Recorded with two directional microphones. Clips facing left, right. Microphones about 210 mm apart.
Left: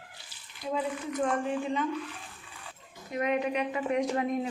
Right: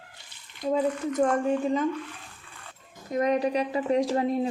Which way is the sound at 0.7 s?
40° right (ahead or behind).